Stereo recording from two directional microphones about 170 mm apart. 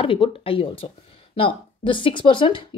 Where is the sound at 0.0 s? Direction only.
30° left (ahead or behind).